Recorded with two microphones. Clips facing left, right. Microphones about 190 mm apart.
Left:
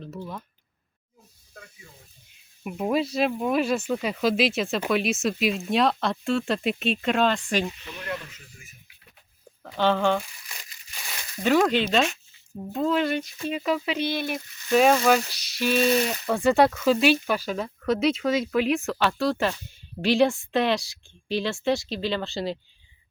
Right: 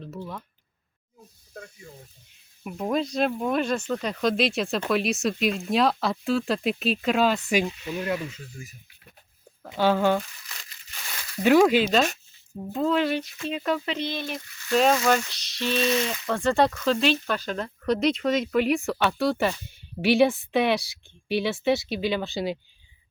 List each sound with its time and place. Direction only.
0.0 s speech: centre (ahead or behind)
1.5 s speech: 45° right (ahead or behind)
2.6 s speech: 5° left (ahead or behind); by 7.7 s 10° right (ahead or behind)
9.7 s speech: 10° right (ahead or behind)
10.5 s crushing: 15° left (ahead or behind)
11.4 s speech: 10° right (ahead or behind)